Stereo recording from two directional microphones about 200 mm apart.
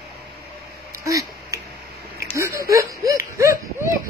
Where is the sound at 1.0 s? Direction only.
15° right (ahead or behind).